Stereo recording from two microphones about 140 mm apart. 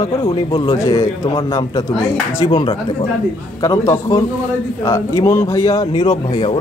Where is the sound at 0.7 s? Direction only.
25° left (ahead or behind).